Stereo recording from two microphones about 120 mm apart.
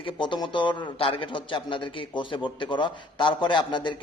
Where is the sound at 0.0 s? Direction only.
40° left (ahead or behind).